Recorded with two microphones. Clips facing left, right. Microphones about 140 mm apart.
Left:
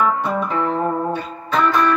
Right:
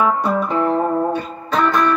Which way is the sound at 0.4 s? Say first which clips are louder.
Right 3 dB; centre (ahead or behind).